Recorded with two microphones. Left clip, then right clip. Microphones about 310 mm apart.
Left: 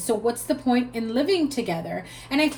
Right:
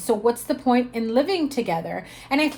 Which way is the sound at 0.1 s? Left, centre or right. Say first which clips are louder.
Right 3 dB; right.